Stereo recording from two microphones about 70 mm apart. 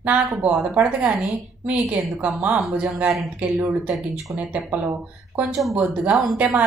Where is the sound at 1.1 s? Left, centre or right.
Centre.